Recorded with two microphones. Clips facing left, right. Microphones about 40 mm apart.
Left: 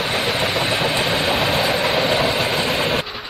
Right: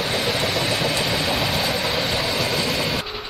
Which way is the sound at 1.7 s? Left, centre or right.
Left.